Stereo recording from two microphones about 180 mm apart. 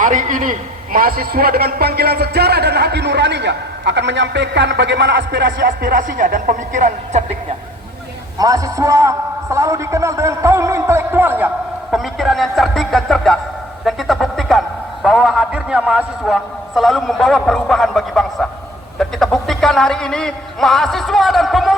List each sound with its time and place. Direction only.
0.0 s a man's voice: 45° right (ahead or behind); by 5.6 s 75° right (ahead or behind)
5.6 s speech: 50° right (ahead or behind)
8.4 s a man's voice: 20° right (ahead or behind); by 13.4 s centre (ahead or behind)
13.8 s a sound: centre (ahead or behind)
15.0 s a man's voice: centre (ahead or behind)